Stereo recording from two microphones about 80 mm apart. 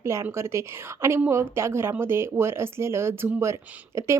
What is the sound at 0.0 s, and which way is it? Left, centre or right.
Speech, right.